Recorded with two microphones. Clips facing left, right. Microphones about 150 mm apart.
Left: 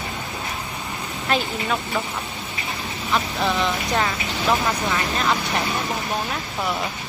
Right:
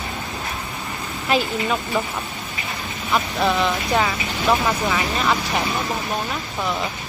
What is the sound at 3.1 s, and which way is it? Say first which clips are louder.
Speech: right 2 dB; centre (ahead or behind).